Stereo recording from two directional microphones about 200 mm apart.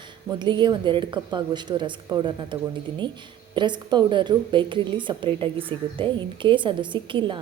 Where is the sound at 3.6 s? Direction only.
25° right (ahead or behind).